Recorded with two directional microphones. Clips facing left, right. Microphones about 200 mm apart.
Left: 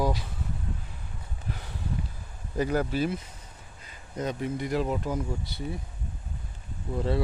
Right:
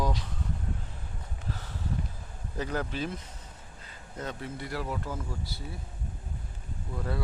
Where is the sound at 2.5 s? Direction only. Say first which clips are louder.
Left 6 dB; 10° left (ahead or behind).